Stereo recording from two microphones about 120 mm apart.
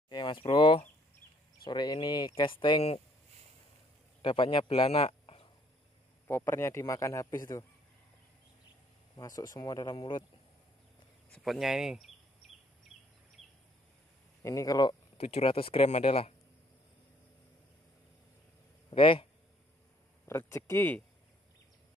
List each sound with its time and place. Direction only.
0.1 s speech: 40° left (ahead or behind)
4.2 s speech: 45° left (ahead or behind)
6.2 s a man's voice: 20° left (ahead or behind)
9.1 s speech: 30° left (ahead or behind)
11.3 s speech: centre (ahead or behind)
14.4 s a man's voice: 30° left (ahead or behind)
15.1 s speech: 55° left (ahead or behind)
18.9 s speech: 45° left (ahead or behind)
20.2 s a man's voice: 20° left (ahead or behind)